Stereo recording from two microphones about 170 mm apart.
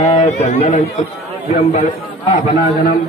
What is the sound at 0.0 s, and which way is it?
A man's voice, 40° left (ahead or behind).